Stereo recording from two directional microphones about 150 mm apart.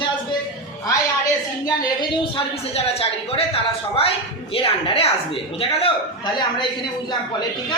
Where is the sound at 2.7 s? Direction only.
40° left (ahead or behind).